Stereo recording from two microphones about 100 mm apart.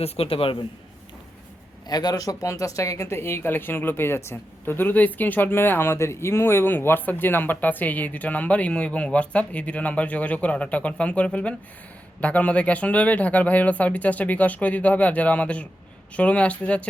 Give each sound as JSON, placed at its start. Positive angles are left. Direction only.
{"t": 0.0, "sound": "a man's voice", "side_deg": 70}
{"t": 1.9, "sound": "speech", "side_deg": 40}